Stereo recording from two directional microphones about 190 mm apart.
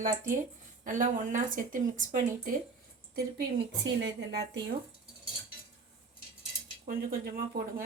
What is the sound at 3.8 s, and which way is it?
Speech, 70° right (ahead or behind).